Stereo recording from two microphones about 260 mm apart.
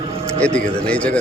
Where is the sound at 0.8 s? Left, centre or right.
Centre.